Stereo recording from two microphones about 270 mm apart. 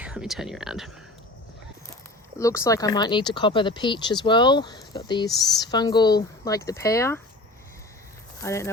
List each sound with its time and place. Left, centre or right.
0.0 s speech: centre
2.4 s speech: centre
8.4 s speech: centre